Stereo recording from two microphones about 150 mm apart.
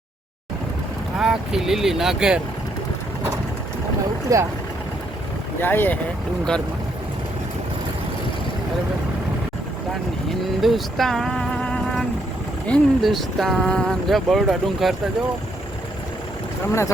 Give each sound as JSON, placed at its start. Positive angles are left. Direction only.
{"t": 1.2, "sound": "speech", "side_deg": -5}
{"t": 4.3, "sound": "speech", "side_deg": -20}
{"t": 5.6, "sound": "speech", "side_deg": 15}
{"t": 10.6, "sound": "speech", "side_deg": 0}